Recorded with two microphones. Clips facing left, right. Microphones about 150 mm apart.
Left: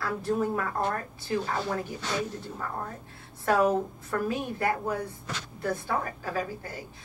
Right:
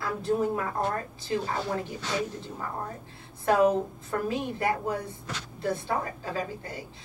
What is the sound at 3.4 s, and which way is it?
A woman's voice, 20° right (ahead or behind).